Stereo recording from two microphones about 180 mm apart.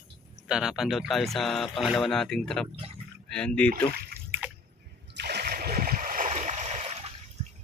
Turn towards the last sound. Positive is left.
turn(degrees=-35)  # may be behind; listen again after turning